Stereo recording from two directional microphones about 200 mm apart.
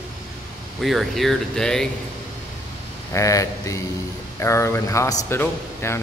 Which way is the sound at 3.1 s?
15° left (ahead or behind).